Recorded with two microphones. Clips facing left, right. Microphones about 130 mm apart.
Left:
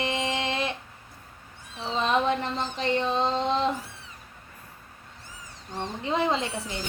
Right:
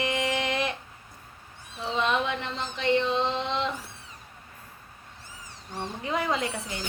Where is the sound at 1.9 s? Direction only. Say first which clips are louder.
Left 3 dB; 35° left (ahead or behind).